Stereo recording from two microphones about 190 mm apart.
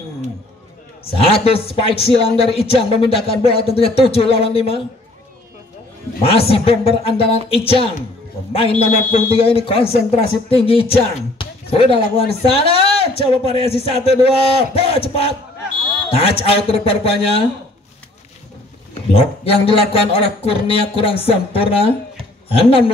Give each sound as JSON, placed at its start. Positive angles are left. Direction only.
{"t": 1.1, "sound": "speech", "side_deg": 30}
{"t": 6.2, "sound": "speech", "side_deg": 30}
{"t": 19.1, "sound": "speech", "side_deg": 30}